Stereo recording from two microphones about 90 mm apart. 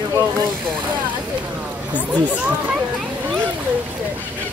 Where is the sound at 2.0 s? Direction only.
15° right (ahead or behind).